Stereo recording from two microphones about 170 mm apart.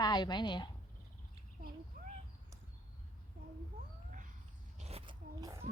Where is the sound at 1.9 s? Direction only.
45° right (ahead or behind).